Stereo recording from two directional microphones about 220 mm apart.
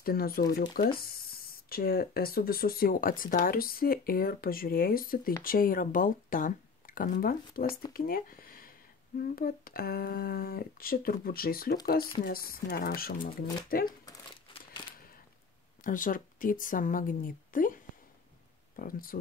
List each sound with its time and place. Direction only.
0.0 s speech: 45° left (ahead or behind)
13.8 s crumpling: 20° left (ahead or behind)
15.8 s speech: 40° left (ahead or behind)
18.8 s speech: 40° left (ahead or behind)